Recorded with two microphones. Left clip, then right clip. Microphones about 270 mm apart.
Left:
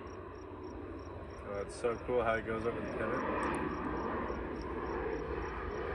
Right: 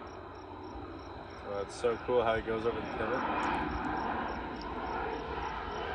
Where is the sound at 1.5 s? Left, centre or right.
Right.